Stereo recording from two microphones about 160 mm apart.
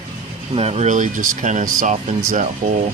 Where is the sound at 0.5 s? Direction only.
40° right (ahead or behind).